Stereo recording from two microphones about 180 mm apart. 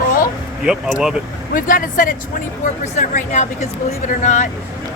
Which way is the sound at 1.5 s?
50° left (ahead or behind).